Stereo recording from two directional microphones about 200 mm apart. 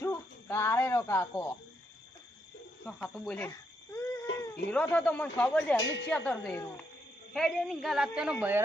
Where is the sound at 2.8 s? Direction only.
Centre (ahead or behind).